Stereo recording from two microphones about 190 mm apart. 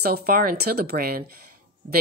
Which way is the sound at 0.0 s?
50° right (ahead or behind).